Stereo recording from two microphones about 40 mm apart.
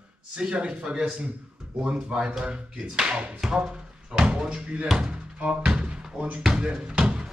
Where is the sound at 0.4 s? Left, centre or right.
Right.